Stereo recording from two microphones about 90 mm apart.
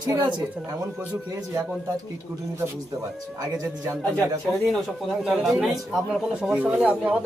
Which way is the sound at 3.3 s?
40° right (ahead or behind).